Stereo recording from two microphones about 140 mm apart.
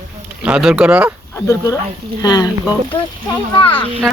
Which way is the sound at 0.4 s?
5° right (ahead or behind).